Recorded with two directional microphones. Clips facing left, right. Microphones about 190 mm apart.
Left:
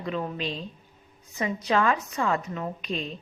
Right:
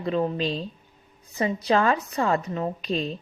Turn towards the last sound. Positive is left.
turn(degrees=-35)  # may be behind; listen again after turning